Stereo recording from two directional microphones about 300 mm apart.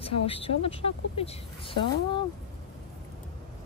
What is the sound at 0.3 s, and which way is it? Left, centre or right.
Speech, centre.